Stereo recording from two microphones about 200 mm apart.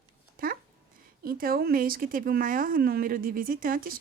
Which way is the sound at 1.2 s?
45° right (ahead or behind).